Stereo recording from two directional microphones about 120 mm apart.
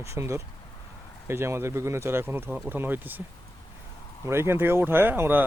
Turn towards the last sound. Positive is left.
turn(degrees=-15)  # may be behind; listen again after turning